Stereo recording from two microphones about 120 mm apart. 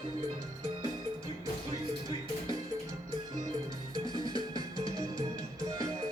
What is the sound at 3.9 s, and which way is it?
Music, 35° right (ahead or behind).